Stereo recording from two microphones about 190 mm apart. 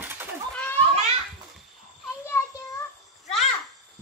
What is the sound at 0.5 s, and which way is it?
Children playing, 10° left (ahead or behind).